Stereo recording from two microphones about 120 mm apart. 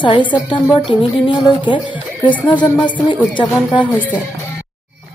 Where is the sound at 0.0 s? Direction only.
40° left (ahead or behind).